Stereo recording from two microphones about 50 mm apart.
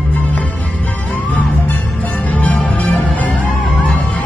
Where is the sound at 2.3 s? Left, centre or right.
Left.